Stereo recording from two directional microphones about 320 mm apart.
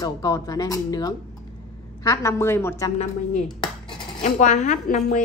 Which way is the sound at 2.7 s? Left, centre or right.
Centre.